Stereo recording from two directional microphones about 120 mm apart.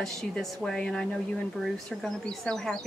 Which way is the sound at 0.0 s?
5° left (ahead or behind).